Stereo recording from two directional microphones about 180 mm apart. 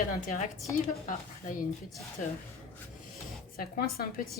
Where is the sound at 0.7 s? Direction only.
15° left (ahead or behind).